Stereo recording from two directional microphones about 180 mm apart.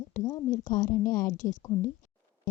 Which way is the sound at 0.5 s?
45° left (ahead or behind).